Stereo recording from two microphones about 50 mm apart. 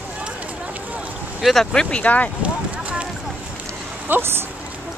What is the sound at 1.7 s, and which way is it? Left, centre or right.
Speech, centre.